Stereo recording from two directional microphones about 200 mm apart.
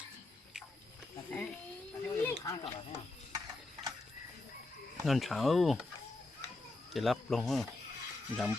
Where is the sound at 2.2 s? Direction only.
15° left (ahead or behind).